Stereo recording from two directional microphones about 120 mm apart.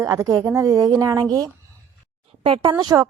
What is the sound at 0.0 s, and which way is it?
A woman's voice, 25° right (ahead or behind).